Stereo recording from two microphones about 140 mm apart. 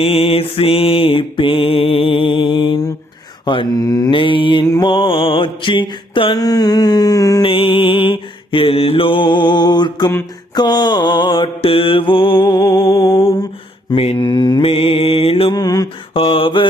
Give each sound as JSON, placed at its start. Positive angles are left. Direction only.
{"t": 0.0, "sound": "mantra", "side_deg": 45}
{"t": 4.6, "sound": "mantra", "side_deg": 25}
{"t": 4.9, "sound": "mantra", "side_deg": 40}
{"t": 7.4, "sound": "mantra", "side_deg": 40}
{"t": 12.4, "sound": "music", "side_deg": 40}
{"t": 12.9, "sound": "music", "side_deg": 25}
{"t": 13.9, "sound": "mantra", "side_deg": 45}
{"t": 15.5, "sound": "mantra", "side_deg": 25}
{"t": 16.1, "sound": "mantra", "side_deg": 40}